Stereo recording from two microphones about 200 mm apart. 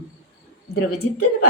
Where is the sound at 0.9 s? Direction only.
90° left.